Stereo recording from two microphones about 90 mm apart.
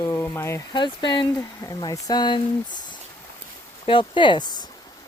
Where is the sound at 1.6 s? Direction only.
40° left (ahead or behind); by 2.4 s 55° left (ahead or behind).